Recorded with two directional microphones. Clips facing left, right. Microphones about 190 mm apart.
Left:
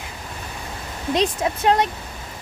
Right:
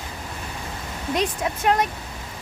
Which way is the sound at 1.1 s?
30° left (ahead or behind).